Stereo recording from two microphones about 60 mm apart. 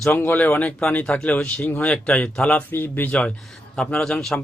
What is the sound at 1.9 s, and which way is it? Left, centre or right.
Speech, left.